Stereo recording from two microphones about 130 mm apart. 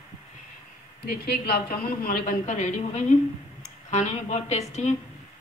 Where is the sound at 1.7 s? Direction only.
90° left.